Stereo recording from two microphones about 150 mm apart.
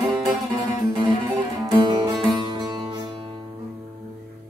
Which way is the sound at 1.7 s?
30° right (ahead or behind).